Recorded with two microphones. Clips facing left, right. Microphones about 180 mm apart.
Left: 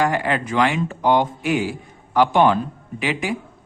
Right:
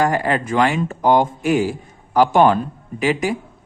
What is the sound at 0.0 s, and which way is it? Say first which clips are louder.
Speech: right 2 dB; 40° right (ahead or behind).